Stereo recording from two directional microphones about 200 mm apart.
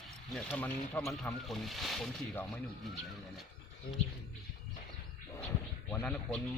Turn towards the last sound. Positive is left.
turn(degrees=5)  # may be behind; listen again after turning